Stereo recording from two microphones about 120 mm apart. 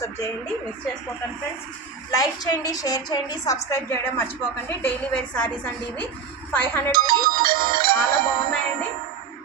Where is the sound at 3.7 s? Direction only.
20° left (ahead or behind).